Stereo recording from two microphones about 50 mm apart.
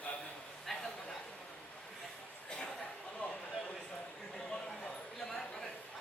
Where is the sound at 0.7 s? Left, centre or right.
Centre.